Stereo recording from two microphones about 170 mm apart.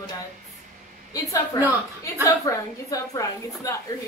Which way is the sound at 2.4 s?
20° left (ahead or behind).